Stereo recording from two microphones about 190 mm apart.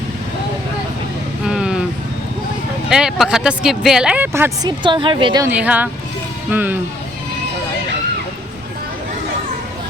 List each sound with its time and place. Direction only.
1.5 s vehicle: 5° right (ahead or behind)
2.9 s speech: 5° right (ahead or behind)
4.8 s a woman's voice: 25° right (ahead or behind)
5.5 s speech: 10° right (ahead or behind)